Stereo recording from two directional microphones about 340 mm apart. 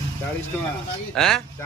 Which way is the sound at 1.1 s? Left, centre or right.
Centre.